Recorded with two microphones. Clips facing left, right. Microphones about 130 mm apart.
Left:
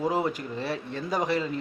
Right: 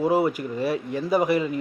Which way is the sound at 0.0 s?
10° right (ahead or behind).